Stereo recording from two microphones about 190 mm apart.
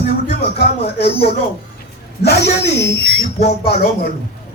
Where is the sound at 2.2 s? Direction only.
60° left (ahead or behind).